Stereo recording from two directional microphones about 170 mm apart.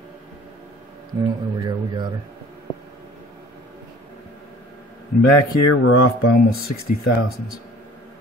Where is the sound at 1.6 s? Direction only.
25° right (ahead or behind).